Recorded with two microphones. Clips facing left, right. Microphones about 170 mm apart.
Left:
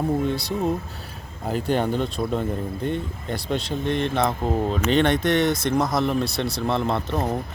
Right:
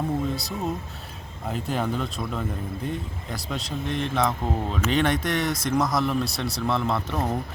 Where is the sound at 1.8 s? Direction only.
30° left (ahead or behind).